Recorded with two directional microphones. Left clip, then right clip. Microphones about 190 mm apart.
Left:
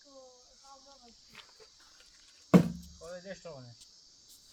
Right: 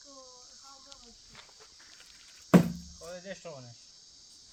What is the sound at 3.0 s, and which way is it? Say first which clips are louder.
Cricket: right 2 dB; 5° left (ahead or behind).